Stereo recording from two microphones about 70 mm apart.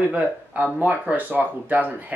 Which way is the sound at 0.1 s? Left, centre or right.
Right.